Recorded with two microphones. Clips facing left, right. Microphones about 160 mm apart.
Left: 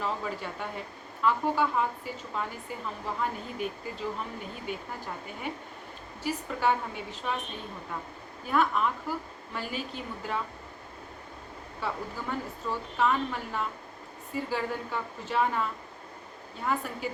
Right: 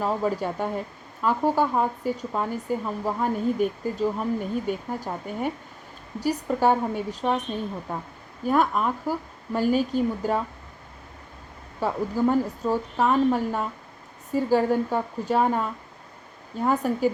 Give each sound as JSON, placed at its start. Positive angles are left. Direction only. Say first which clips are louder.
{"t": 0.0, "sound": "a woman's voice", "louder": "right 8 dB", "side_deg": -45}
{"t": 11.8, "sound": "a woman's voice", "louder": "right 11 dB", "side_deg": -40}
{"t": 16.6, "sound": "a woman's voice", "louder": "right 9 dB", "side_deg": -40}